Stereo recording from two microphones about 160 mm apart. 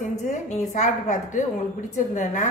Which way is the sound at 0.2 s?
50° left (ahead or behind).